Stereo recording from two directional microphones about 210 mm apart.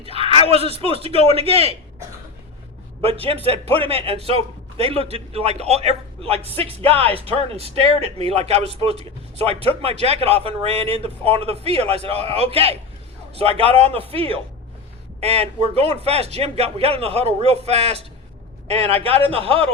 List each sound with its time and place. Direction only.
0.0 s a sound: 25° right (ahead or behind)
0.5 s a man's voice: 25° right (ahead or behind)
3.0 s a man's voice: 25° right (ahead or behind)